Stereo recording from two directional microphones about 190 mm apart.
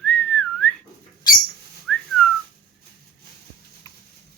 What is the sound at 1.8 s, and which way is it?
Whistling, centre (ahead or behind).